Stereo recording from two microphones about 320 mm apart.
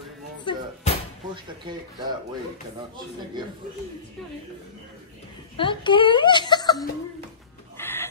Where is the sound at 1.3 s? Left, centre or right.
Centre.